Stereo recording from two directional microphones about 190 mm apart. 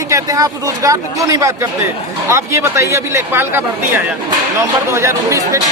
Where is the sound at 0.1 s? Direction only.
20° right (ahead or behind).